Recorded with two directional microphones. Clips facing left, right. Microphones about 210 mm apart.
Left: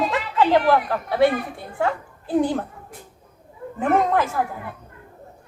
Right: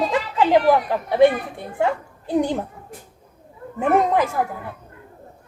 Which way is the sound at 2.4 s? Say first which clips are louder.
Even; 15° right (ahead or behind).